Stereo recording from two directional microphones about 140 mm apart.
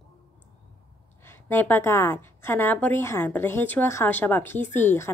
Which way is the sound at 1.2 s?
15° left (ahead or behind).